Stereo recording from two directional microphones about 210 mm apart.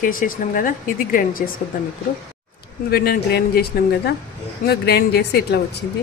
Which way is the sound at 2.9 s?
50° left (ahead or behind).